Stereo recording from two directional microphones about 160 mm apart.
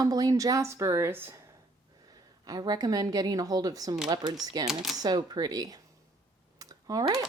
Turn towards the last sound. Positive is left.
turn(degrees=-25)  # may be behind; listen again after turning